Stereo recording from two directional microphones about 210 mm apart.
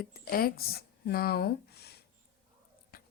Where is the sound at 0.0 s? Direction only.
45° left (ahead or behind).